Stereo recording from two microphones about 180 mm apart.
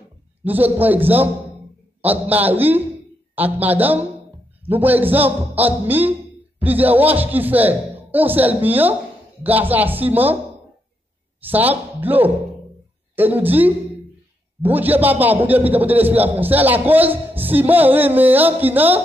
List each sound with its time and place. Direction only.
0.4 s a man's voice: 10° right (ahead or behind)
11.4 s a man's voice: 10° right (ahead or behind)